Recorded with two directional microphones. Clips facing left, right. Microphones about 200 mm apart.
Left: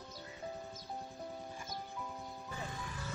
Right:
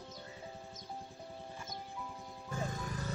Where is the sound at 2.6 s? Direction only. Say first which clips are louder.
Right 6 dB; 45° right (ahead or behind).